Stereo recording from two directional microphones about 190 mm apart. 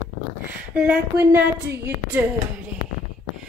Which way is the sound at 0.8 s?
10° right (ahead or behind).